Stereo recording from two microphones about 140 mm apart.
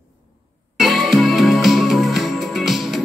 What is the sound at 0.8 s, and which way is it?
Music, centre (ahead or behind).